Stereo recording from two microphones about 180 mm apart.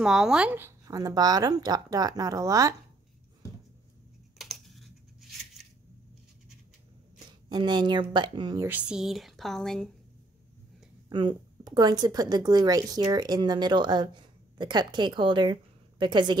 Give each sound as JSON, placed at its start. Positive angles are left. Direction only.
{"t": 0.0, "sound": "speech", "side_deg": -5}
{"t": 4.4, "sound": "computer keyboard", "side_deg": 0}
{"t": 7.4, "sound": "speech", "side_deg": -25}
{"t": 8.6, "sound": "speech", "side_deg": -5}
{"t": 11.1, "sound": "a woman's voice", "side_deg": -25}